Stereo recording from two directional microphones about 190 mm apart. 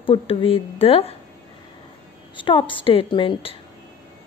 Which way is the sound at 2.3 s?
25° left (ahead or behind).